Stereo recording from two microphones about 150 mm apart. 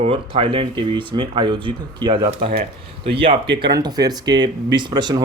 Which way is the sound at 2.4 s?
75° right (ahead or behind).